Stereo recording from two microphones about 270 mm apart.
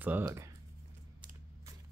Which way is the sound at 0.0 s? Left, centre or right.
Centre.